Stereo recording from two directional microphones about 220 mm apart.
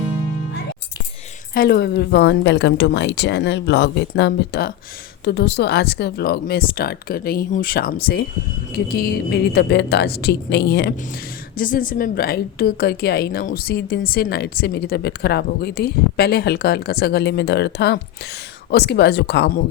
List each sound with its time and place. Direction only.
1.5 s a woman's voice: 45° left (ahead or behind)